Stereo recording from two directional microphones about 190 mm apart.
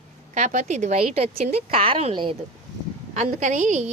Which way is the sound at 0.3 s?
40° right (ahead or behind).